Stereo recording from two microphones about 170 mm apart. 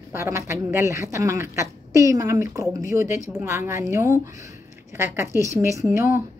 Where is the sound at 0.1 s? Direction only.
15° right (ahead or behind).